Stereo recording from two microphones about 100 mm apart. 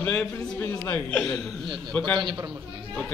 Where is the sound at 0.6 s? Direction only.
20° left (ahead or behind).